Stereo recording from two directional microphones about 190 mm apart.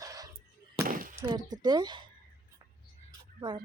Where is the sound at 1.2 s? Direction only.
20° right (ahead or behind).